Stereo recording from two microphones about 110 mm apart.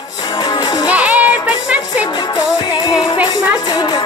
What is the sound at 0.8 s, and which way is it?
Music, 10° right (ahead or behind).